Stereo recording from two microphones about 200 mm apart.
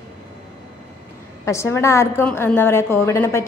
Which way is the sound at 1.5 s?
15° left (ahead or behind).